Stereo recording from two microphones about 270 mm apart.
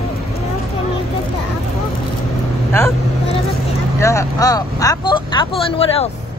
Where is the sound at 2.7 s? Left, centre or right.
Centre.